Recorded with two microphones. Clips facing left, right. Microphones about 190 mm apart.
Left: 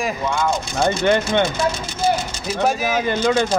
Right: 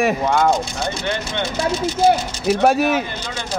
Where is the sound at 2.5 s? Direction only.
65° right (ahead or behind).